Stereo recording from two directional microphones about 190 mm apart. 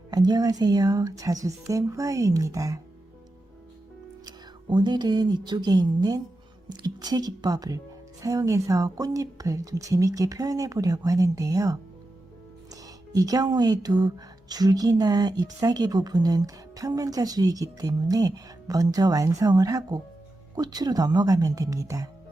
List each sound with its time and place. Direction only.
0.1 s speech: 20° right (ahead or behind)
4.3 s speech: 25° right (ahead or behind)